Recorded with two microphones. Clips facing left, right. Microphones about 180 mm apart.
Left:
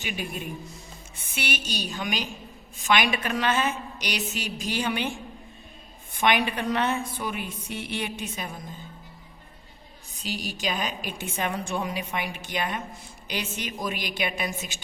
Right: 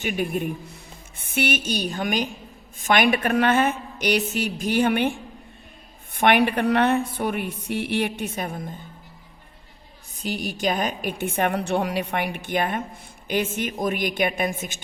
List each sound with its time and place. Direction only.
0.0 s a woman's voice: 55° right (ahead or behind)
6.1 s a woman's voice: 60° right (ahead or behind)
10.2 s a woman's voice: 50° right (ahead or behind)